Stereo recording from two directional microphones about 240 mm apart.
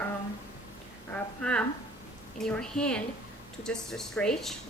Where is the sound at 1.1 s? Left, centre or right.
Centre.